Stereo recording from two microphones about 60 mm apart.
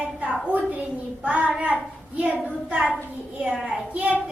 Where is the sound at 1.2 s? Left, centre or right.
Right.